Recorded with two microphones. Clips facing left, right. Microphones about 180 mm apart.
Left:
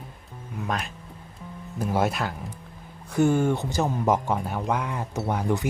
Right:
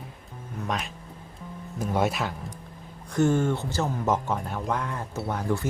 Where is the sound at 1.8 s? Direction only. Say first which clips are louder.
Left 1 dB; centre (ahead or behind).